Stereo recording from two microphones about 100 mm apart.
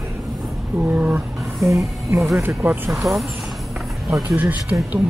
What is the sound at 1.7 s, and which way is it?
Music, 30° right (ahead or behind).